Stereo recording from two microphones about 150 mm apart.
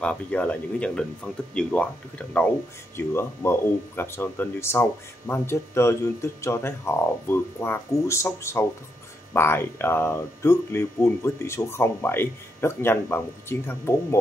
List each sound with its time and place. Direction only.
0.0 s speech: 10° left (ahead or behind)